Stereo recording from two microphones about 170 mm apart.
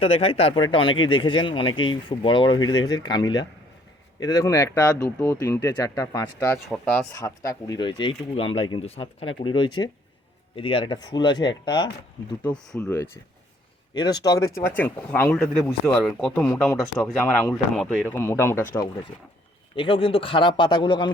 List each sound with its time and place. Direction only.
0.0 s speech: 35° left (ahead or behind); by 6.6 s 15° left (ahead or behind)
6.7 s speech: 5° left (ahead or behind)
7.1 s speech: 15° left (ahead or behind)
12.4 s speech: 5° left (ahead or behind)
13.9 s speech: 25° left (ahead or behind)
19.7 s speech: 30° left (ahead or behind)